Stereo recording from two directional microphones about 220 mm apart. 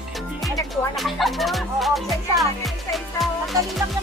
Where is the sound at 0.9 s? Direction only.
Centre (ahead or behind).